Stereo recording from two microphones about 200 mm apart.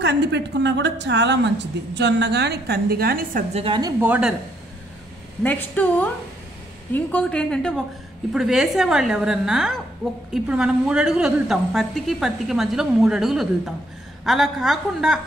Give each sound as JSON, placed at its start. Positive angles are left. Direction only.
{"t": 0.0, "sound": "a woman's voice", "side_deg": -60}
{"t": 3.5, "sound": "a woman's voice", "side_deg": -25}
{"t": 4.0, "sound": "speech", "side_deg": -5}
{"t": 5.4, "sound": "a woman's voice", "side_deg": 10}